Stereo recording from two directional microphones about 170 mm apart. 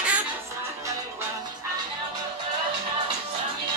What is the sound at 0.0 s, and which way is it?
Music, 10° right (ahead or behind).